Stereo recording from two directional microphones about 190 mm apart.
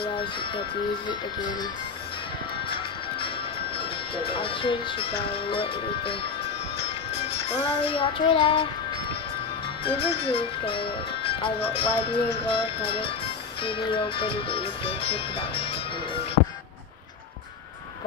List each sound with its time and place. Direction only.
0.0 s speech: 25° left (ahead or behind)
3.7 s speech: 30° left (ahead or behind)
7.2 s music: 30° left (ahead or behind)
9.8 s speech: 30° left (ahead or behind)